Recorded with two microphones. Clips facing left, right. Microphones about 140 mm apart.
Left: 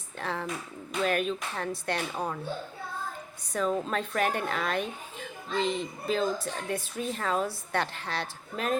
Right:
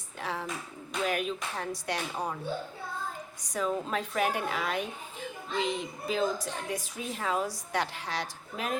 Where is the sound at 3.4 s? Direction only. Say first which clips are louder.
Left 2 dB; 15° right (ahead or behind).